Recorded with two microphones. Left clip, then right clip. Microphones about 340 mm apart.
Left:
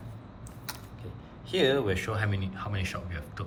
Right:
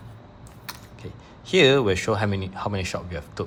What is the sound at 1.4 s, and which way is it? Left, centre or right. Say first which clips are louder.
Speech: right 8 dB; centre.